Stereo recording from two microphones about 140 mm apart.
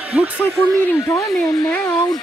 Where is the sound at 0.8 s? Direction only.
20° left (ahead or behind).